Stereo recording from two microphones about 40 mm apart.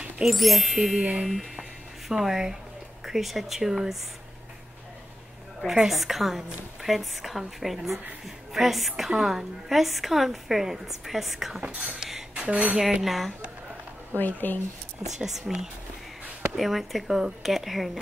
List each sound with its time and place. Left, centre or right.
0.2 s a woman's voice: centre
1.2 s music: centre
3.1 s a woman's voice: centre
5.7 s a woman's voice: centre
11.6 s speech: right
13.0 s a woman's voice: centre
14.1 s speech: left
15.1 s a woman's voice: centre